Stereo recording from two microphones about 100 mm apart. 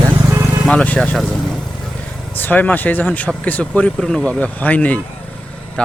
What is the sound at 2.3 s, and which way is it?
Speech, 20° left (ahead or behind).